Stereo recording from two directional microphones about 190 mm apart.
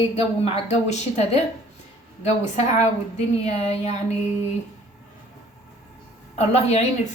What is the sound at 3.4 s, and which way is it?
Speech, 35° left (ahead or behind).